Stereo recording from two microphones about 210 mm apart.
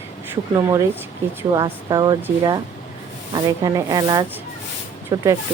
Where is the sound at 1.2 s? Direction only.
10° right (ahead or behind).